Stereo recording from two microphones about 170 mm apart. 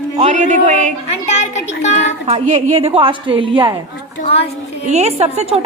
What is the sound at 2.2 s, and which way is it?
A woman's voice, 40° right (ahead or behind).